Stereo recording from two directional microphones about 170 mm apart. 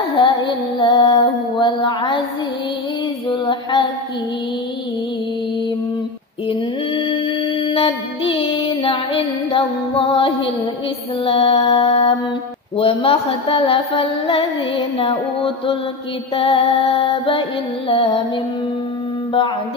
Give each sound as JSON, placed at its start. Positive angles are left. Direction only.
{"t": 0.2, "sound": "music", "side_deg": 30}
{"t": 1.1, "sound": "a sound", "side_deg": 25}
{"t": 3.3, "sound": "a sound", "side_deg": 25}
{"t": 7.6, "sound": "music", "side_deg": 30}
{"t": 11.2, "sound": "mantra", "side_deg": 30}
{"t": 12.7, "sound": "music", "side_deg": 35}